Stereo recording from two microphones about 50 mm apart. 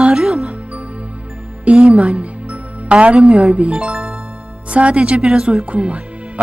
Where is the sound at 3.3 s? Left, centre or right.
Right.